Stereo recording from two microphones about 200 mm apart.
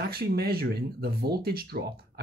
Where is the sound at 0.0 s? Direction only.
50° right (ahead or behind).